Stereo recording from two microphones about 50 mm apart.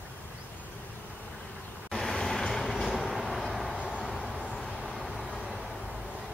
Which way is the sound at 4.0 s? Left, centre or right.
Centre.